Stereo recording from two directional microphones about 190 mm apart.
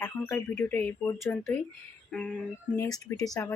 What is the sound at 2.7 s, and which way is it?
Speech, 15° left (ahead or behind).